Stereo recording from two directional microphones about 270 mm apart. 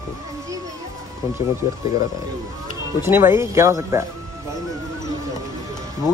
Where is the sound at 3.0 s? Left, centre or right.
Centre.